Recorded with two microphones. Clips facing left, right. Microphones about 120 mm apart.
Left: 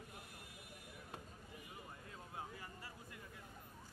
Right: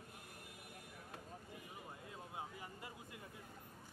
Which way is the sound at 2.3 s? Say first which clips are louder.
Even; 20° right (ahead or behind).